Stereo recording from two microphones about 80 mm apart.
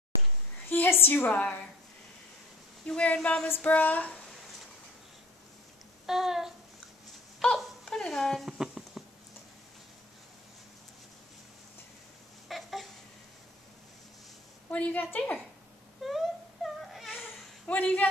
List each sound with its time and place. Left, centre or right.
0.7 s a woman's voice: left
2.9 s speech: centre
3.4 s a woman's voice: left
6.0 s a sound: centre
7.5 s speech: centre
8.5 s a sound: centre
12.4 s babbling: centre
14.7 s a woman's voice: centre
16.0 s wail: centre
16.8 s baby cry: centre
17.6 s speech: centre